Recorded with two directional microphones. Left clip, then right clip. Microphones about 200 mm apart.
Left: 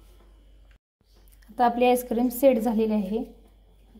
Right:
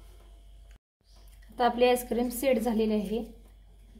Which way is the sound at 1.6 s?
35° left (ahead or behind).